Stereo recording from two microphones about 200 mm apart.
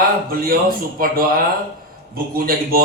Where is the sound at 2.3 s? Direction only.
50° right (ahead or behind).